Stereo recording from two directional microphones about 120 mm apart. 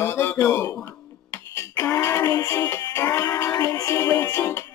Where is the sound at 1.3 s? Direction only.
20° left (ahead or behind).